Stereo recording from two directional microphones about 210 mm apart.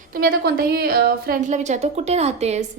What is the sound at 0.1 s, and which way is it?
A woman's voice, 45° right (ahead or behind).